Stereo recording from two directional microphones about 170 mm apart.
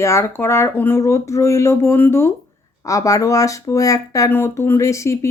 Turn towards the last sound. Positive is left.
turn(degrees=15)  # may be behind; listen again after turning